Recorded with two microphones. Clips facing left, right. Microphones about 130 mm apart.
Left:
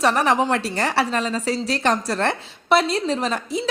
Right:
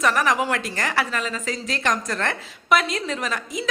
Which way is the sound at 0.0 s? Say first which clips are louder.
Left 3 dB; 30° left (ahead or behind).